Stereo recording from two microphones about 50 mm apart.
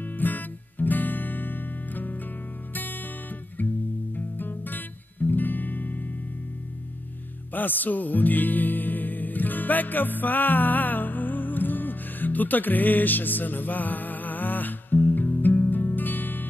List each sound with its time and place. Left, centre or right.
0.0 s music: left
4.1 s music: left
7.5 s music: left